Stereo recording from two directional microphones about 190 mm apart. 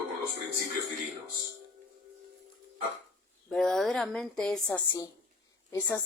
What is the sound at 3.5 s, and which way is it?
A woman's voice, 5° left (ahead or behind).